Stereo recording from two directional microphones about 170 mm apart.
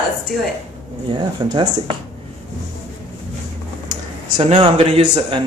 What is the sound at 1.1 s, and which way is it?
Speech, 25° right (ahead or behind).